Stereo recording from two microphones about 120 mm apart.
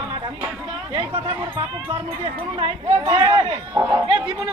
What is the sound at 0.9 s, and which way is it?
Speech, 50° right (ahead or behind).